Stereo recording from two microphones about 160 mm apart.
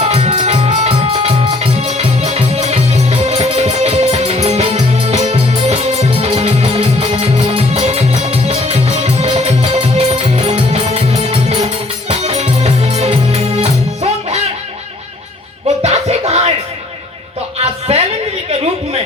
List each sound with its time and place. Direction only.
0.0 s music: 45° right (ahead or behind)
15.6 s music: 40° right (ahead or behind)
17.6 s music: 40° right (ahead or behind)